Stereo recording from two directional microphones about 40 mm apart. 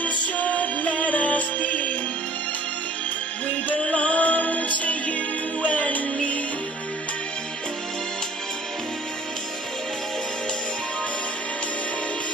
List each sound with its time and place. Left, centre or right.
0.0 s music: left
3.6 s music: left